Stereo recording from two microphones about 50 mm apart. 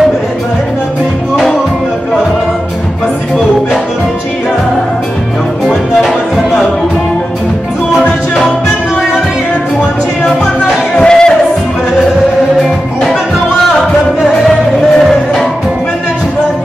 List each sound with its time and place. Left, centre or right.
5.7 s music: centre
8.0 s music: left
11.0 s music: centre
14.2 s music: centre